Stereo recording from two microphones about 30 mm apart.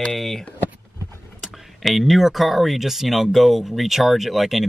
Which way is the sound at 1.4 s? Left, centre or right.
Centre.